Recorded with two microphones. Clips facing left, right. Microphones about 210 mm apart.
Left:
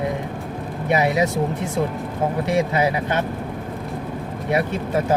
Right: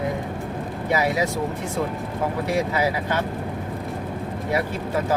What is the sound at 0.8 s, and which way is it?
Speech, 20° left (ahead or behind).